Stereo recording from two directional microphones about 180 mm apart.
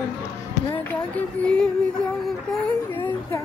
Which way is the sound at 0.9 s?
10° left (ahead or behind).